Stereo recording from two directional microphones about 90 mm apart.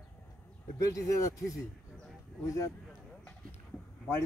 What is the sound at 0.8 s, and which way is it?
Speech, 35° left (ahead or behind).